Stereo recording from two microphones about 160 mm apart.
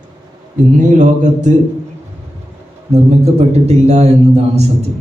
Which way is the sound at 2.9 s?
40° right (ahead or behind).